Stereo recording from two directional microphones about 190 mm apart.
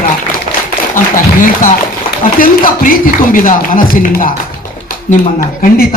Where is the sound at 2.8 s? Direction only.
45° left (ahead or behind).